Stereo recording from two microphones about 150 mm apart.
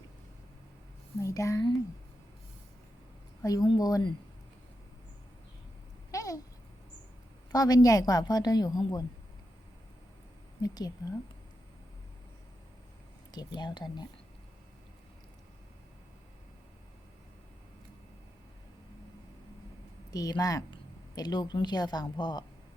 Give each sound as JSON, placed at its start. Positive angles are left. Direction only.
{"t": 1.2, "sound": "a woman's voice", "side_deg": 20}
{"t": 3.4, "sound": "a woman's voice", "side_deg": 25}
{"t": 6.1, "sound": "babbling", "side_deg": 20}
{"t": 7.5, "sound": "a woman's voice", "side_deg": 25}
{"t": 10.6, "sound": "a woman's voice", "side_deg": 25}
{"t": 13.3, "sound": "a woman's voice", "side_deg": 30}
{"t": 20.1, "sound": "a woman's voice", "side_deg": 25}